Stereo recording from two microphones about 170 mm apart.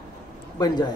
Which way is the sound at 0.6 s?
25° left (ahead or behind).